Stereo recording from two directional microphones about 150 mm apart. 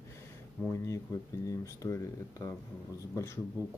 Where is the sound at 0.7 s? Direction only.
20° left (ahead or behind).